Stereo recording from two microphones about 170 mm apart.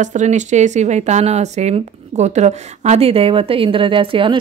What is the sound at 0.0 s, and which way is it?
Speech, 45° right (ahead or behind).